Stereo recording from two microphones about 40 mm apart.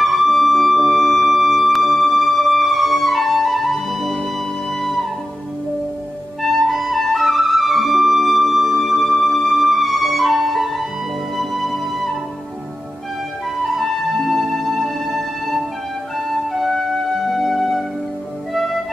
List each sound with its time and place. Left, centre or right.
0.0 s music: centre
6.4 s music: centre
13.7 s music: centre